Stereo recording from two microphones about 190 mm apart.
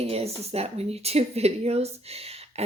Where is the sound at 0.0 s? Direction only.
30° right (ahead or behind).